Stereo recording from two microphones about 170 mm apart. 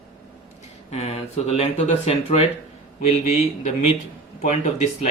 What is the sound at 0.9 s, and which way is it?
Speech, 35° left (ahead or behind).